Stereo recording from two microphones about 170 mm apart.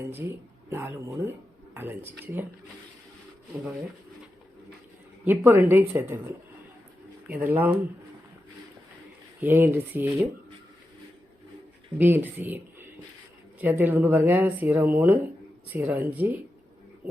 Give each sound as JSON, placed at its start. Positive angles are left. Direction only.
{"t": 0.1, "sound": "speech", "side_deg": -15}
{"t": 5.2, "sound": "speech", "side_deg": -15}
{"t": 9.4, "sound": "speech", "side_deg": -10}
{"t": 11.9, "sound": "speech", "side_deg": -10}